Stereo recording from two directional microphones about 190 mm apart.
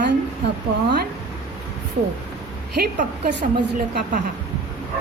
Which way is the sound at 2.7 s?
50° right (ahead or behind).